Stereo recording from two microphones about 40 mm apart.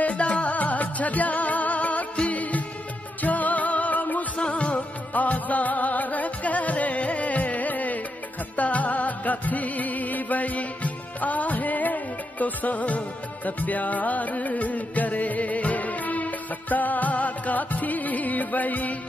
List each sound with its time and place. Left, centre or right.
0.0 s music: left
4.4 s music: left
5.1 s music: left